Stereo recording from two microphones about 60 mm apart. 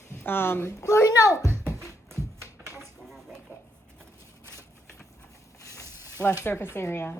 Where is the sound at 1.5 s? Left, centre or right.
Right.